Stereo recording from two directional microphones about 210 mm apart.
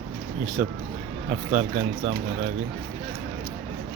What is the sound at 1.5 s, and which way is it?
Speech, 35° right (ahead or behind).